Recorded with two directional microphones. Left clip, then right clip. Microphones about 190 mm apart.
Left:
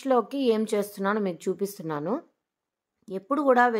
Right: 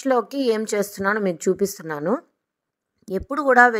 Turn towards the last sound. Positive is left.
turn(degrees=-25)  # may be behind; listen again after turning